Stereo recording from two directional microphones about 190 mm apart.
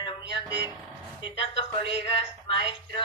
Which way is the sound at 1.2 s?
30° left (ahead or behind).